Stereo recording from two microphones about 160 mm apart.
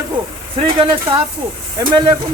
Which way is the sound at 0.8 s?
35° right (ahead or behind).